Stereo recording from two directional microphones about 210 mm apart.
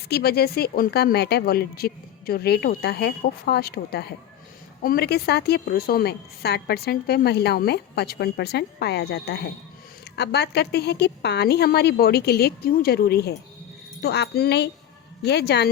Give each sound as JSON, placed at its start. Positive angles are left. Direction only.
{"t": 0.1, "sound": "a woman's voice", "side_deg": 50}